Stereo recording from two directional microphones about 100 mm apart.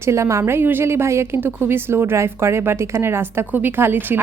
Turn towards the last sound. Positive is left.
turn(degrees=-20)  # may be behind; listen again after turning